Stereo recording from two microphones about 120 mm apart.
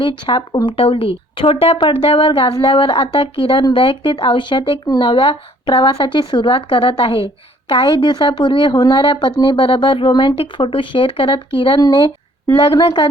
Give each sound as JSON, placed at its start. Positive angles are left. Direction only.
{"t": 0.0, "sound": "speech", "side_deg": 45}